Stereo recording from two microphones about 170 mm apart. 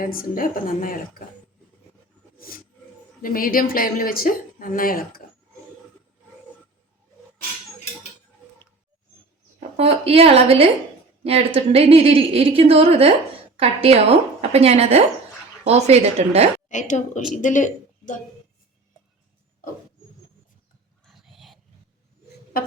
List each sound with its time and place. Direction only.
0.0 s speech: 55° left (ahead or behind)
3.2 s speech: 55° left (ahead or behind)
9.6 s a woman's voice: 35° right (ahead or behind)
16.6 s a woman's voice: 45° left (ahead or behind)
21.0 s a sound: centre (ahead or behind)
22.5 s a sound: 60° left (ahead or behind)